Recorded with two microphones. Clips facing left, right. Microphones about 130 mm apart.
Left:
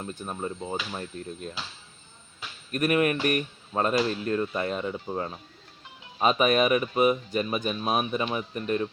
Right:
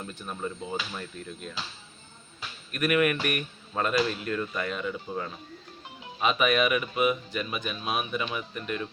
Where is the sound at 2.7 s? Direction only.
35° left (ahead or behind).